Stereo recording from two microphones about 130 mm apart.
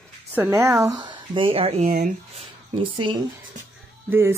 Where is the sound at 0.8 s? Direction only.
30° right (ahead or behind); by 1.8 s 45° right (ahead or behind).